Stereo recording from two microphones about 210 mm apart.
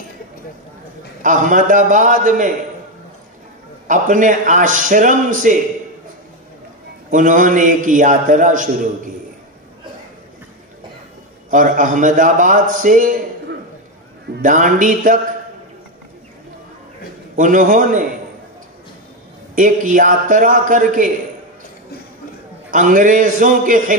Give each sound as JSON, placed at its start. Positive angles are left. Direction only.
{"t": 1.2, "sound": "a man's voice", "side_deg": -40}
{"t": 3.8, "sound": "a man's voice", "side_deg": -40}
{"t": 7.1, "sound": "a man's voice", "side_deg": -40}
{"t": 11.5, "sound": "a man's voice", "side_deg": -40}
{"t": 14.4, "sound": "a man's voice", "side_deg": -40}
{"t": 17.4, "sound": "a man's voice", "side_deg": -40}
{"t": 19.5, "sound": "a man's voice", "side_deg": -40}
{"t": 22.7, "sound": "a man's voice", "side_deg": -40}